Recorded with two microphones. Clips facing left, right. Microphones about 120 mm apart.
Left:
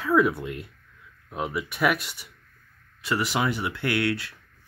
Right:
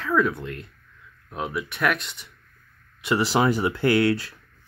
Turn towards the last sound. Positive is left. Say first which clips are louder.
# right 6 dB
turn(degrees=-35)  # may be behind; listen again after turning